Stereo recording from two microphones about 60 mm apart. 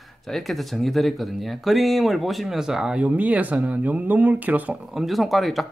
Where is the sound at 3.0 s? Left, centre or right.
Right.